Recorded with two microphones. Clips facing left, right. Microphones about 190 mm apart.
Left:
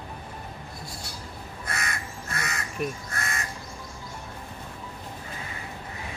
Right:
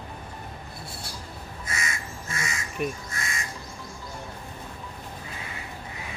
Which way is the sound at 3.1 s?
60° left (ahead or behind).